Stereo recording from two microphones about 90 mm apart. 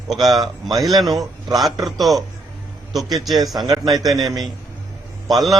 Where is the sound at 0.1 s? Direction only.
Centre (ahead or behind).